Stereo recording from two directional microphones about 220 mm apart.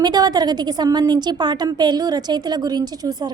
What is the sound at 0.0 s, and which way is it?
A woman's voice, 20° right (ahead or behind).